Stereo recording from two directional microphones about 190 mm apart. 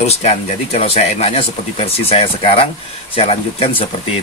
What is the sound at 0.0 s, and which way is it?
Speech, 35° left (ahead or behind).